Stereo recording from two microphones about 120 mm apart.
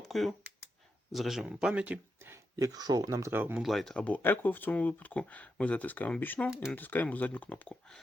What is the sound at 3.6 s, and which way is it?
Speech, centre (ahead or behind).